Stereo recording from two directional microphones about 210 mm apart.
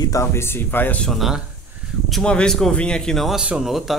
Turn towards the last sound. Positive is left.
turn(degrees=0)  # may be behind; listen again after turning